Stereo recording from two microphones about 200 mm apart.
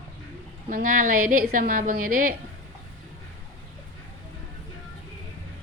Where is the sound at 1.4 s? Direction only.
45° right (ahead or behind).